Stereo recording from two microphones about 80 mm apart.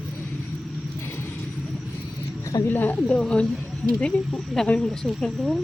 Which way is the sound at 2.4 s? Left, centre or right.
Left.